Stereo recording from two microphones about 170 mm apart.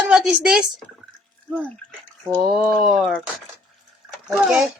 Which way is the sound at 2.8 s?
Centre (ahead or behind).